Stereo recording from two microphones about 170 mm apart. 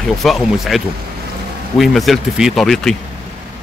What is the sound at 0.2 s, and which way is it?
Speech, centre (ahead or behind).